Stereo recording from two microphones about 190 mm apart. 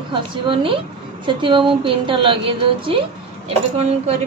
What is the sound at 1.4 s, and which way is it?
Speech, 25° right (ahead or behind).